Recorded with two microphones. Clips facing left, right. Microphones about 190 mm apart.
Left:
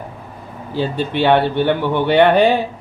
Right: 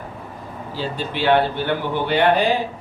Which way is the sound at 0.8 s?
60° left (ahead or behind).